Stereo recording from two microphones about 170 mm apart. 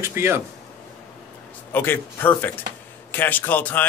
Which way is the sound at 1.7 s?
15° left (ahead or behind).